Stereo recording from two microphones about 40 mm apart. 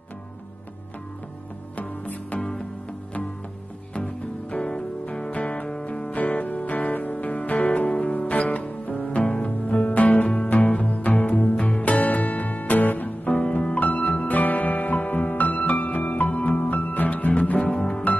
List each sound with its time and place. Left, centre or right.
1.8 s music: left
3.9 s music: left
12.0 s music: left
17.6 s music: left